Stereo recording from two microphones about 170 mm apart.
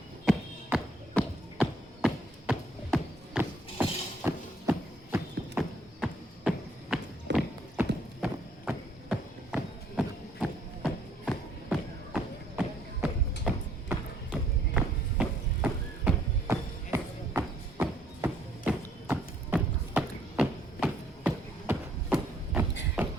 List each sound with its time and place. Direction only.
0.3 s music: centre (ahead or behind)
5.1 s horse: 10° right (ahead or behind)
6.9 s walk: 5° right (ahead or behind)
7.3 s clip-clop: 90° right
8.2 s horse: 5° right (ahead or behind)
10.8 s a sound: centre (ahead or behind)
13.4 s music: centre (ahead or behind)